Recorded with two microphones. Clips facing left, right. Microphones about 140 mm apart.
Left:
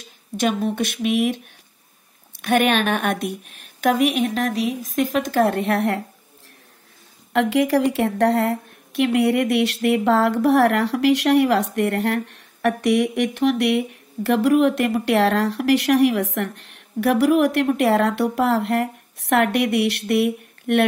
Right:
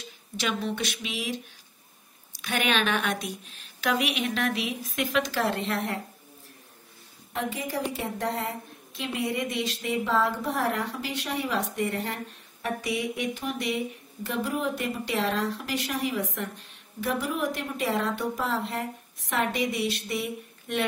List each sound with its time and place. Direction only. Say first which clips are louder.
0.0 s a woman's voice: left 10 dB; 50° left (ahead or behind); by 6.0 s 65° left (ahead or behind)
7.3 s a woman's voice: left 13 dB; 90° left; by 20.8 s 65° left (ahead or behind)